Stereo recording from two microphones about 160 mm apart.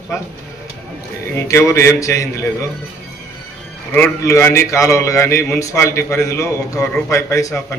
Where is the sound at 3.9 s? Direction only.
15° left (ahead or behind).